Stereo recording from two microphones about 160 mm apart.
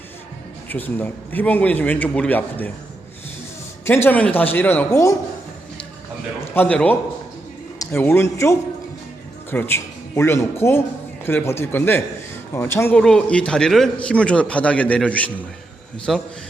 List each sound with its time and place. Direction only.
0.7 s a man's voice: 10° left (ahead or behind)
3.8 s a man's voice: 15° left (ahead or behind)
6.5 s a man's voice: 10° left (ahead or behind)